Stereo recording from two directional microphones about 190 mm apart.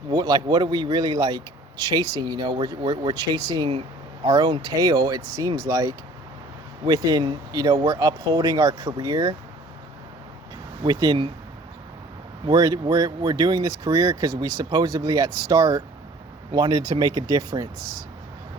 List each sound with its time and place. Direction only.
0.1 s speech: 20° right (ahead or behind)
10.8 s speech: 20° right (ahead or behind)
12.5 s speech: 20° right (ahead or behind)